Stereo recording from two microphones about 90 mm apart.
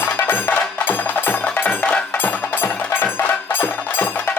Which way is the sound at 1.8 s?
15° left (ahead or behind).